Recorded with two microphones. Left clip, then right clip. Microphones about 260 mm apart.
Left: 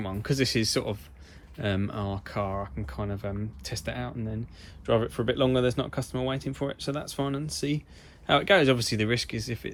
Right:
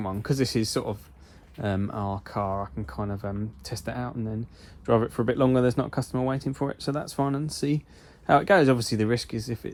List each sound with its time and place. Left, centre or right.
0.0 s speech: centre